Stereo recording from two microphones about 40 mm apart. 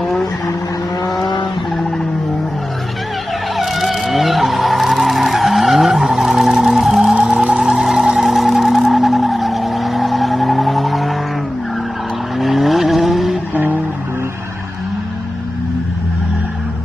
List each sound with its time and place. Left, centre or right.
3.5 s vehicle: centre
7.2 s music: centre
8.3 s a sound: centre
12.4 s vehicle: centre